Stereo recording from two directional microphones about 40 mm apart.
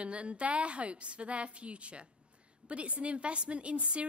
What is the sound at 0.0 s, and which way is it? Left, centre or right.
A woman's voice, right.